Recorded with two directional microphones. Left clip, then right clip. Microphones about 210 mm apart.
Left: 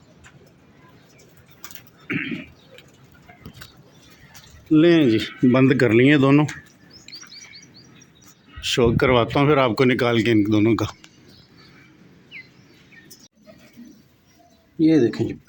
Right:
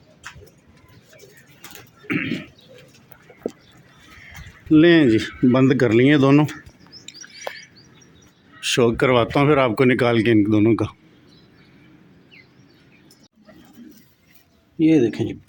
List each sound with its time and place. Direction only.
2.0 s a sound: 35° right (ahead or behind)
4.7 s speech: 15° right (ahead or behind)
7.1 s chirp: 10° right (ahead or behind)
8.6 s speech: 10° right (ahead or behind)
14.8 s speech: 5° right (ahead or behind)